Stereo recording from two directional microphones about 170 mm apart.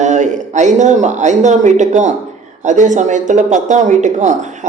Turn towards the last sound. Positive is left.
turn(degrees=-45)  # may be behind; listen again after turning